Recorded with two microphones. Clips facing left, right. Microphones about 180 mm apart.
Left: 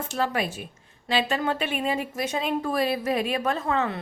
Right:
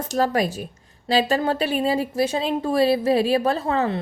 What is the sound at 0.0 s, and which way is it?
A woman's voice, 40° right (ahead or behind).